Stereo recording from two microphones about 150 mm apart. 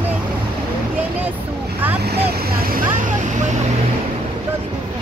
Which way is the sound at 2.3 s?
85° right.